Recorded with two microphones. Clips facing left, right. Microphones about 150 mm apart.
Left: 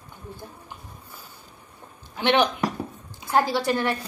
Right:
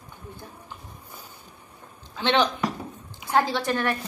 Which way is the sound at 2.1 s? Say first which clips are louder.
Left 2 dB; 15° left (ahead or behind).